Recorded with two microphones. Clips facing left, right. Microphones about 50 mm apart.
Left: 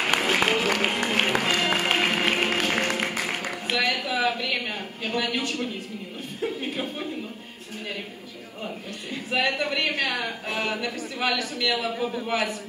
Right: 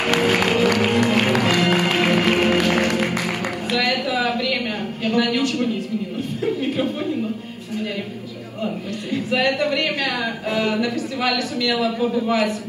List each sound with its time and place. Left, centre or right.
0.0 s music: right
6.4 s speech: right
8.6 s a man's voice: right